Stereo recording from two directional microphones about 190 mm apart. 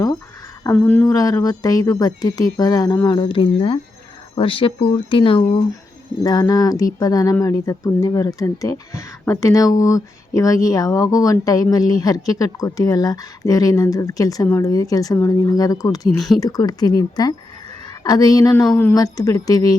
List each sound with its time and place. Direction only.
0.6 s speech: 10° left (ahead or behind)
16.1 s speech: centre (ahead or behind)
16.4 s speech: 20° left (ahead or behind)